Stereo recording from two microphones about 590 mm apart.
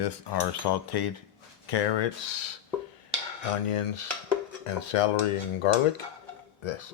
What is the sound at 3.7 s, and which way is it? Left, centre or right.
Speech, left.